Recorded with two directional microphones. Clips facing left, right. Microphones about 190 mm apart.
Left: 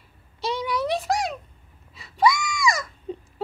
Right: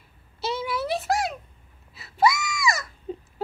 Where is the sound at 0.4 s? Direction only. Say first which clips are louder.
Left 2 dB; 5° right (ahead or behind).